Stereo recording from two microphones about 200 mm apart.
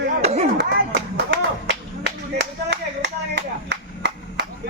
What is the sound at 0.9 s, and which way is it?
Clapping, 55° right (ahead or behind).